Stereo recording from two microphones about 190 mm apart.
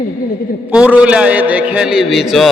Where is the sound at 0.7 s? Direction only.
5° right (ahead or behind).